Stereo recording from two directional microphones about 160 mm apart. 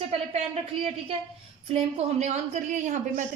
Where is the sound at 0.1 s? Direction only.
40° right (ahead or behind).